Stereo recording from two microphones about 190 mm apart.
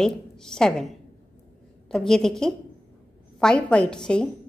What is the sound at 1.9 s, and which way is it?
A woman's voice, centre (ahead or behind).